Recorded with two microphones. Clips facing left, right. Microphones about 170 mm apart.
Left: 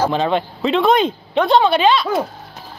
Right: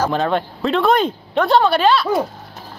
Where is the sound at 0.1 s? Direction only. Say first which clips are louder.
Left 1 dB; centre (ahead or behind).